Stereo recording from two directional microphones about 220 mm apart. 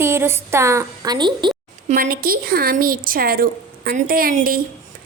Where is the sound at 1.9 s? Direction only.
40° right (ahead or behind).